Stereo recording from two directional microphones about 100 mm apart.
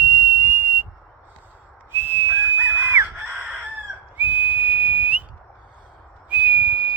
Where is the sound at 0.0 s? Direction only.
25° right (ahead or behind).